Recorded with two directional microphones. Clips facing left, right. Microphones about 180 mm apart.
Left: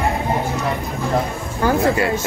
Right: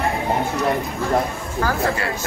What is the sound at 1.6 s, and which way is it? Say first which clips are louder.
Speech: left 5 dB; 15° left (ahead or behind).